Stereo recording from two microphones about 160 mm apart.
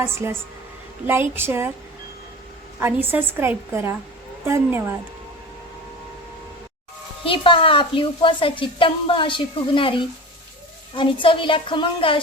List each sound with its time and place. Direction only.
0.0 s a woman's voice: 15° right (ahead or behind)
2.8 s a woman's voice: 10° right (ahead or behind)
7.3 s a woman's voice: 35° left (ahead or behind)